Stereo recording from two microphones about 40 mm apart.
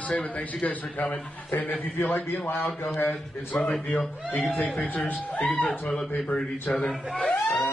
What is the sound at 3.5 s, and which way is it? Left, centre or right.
A man's voice, left.